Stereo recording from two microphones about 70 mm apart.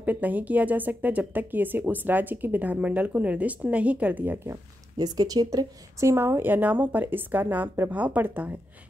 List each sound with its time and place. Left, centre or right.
0.0 s speech: right
4.9 s speech: right
5.9 s speech: right